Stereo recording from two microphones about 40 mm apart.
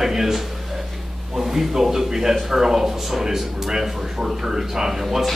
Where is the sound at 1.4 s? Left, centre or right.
Centre.